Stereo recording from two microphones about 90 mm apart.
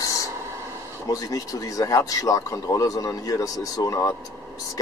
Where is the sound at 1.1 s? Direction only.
40° left (ahead or behind).